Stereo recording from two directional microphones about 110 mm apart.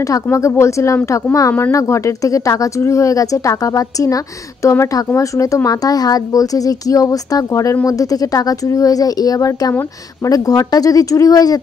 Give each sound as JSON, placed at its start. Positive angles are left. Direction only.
{"t": 0.0, "sound": "speech", "side_deg": 30}